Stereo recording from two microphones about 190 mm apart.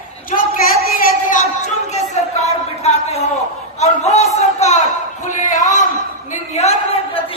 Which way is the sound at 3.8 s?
35° left (ahead or behind).